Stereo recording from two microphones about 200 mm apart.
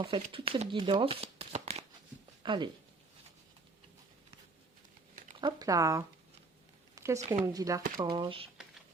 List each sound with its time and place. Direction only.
0.0 s speech: 25° right (ahead or behind)
5.4 s speech: 20° right (ahead or behind)
6.9 s a sound: 15° right (ahead or behind)
7.3 s speech: 15° right (ahead or behind)